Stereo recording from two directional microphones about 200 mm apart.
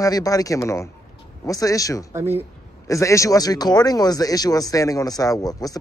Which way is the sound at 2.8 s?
15° left (ahead or behind).